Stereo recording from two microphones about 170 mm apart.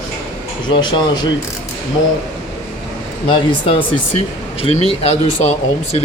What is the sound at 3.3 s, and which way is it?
Speech, 30° left (ahead or behind).